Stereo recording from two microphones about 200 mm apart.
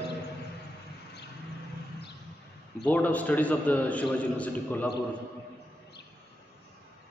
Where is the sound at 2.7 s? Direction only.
5° left (ahead or behind).